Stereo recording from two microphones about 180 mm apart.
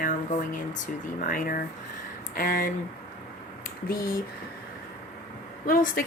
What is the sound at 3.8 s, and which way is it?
Speech, 50° left (ahead or behind).